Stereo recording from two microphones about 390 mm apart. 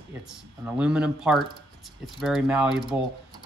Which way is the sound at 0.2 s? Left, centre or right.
Centre.